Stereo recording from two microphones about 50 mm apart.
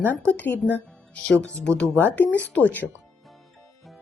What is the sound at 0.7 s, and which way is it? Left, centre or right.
Speech, left.